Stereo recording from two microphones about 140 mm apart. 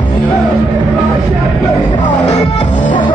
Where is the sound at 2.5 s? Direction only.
55° left (ahead or behind).